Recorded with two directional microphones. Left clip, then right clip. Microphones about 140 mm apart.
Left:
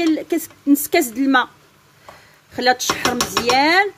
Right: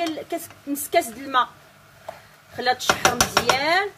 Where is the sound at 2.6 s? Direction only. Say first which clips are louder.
Left 3 dB; 90° left.